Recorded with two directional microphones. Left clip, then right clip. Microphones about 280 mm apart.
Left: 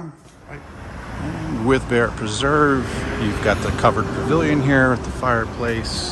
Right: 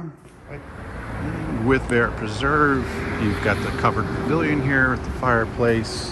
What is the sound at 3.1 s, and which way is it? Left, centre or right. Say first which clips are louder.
Speech: left 1 dB; left.